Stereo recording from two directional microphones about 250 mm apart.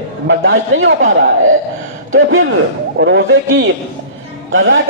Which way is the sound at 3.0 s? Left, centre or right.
Right.